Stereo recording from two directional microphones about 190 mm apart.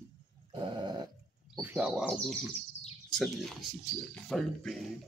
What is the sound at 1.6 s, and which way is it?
Speech, 5° right (ahead or behind).